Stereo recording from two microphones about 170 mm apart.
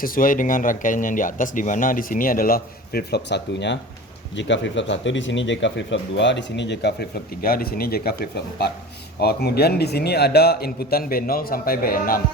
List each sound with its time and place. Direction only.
0.0 s speech: 55° left (ahead or behind)